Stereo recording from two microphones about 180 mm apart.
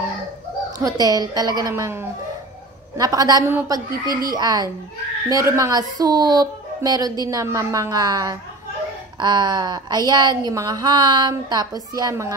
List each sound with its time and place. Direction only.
0.7 s speech: 20° right (ahead or behind)